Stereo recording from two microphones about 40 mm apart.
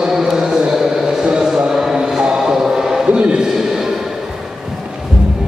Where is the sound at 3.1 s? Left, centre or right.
Right.